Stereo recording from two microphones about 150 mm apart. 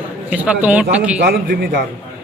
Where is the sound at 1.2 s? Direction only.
90° right.